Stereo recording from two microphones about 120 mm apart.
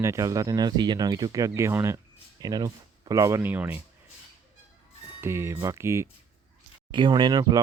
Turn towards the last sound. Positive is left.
turn(degrees=-35)  # may be behind; listen again after turning